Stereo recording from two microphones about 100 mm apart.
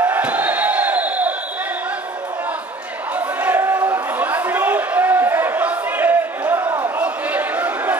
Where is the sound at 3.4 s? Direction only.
20° right (ahead or behind).